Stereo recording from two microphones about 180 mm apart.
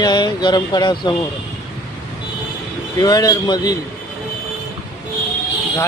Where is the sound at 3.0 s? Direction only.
20° left (ahead or behind).